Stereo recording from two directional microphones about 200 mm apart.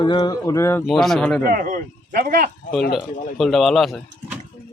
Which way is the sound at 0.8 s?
Centre (ahead or behind).